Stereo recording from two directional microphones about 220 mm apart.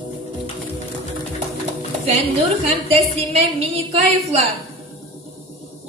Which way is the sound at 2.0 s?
25° right (ahead or behind).